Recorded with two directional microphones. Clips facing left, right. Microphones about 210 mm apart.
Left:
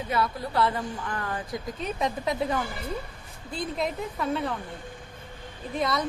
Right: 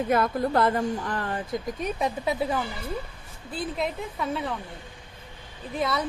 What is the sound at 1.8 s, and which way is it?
A woman's voice, 10° right (ahead or behind).